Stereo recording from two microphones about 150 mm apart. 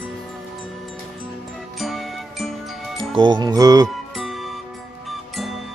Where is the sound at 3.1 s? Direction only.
30° right (ahead or behind).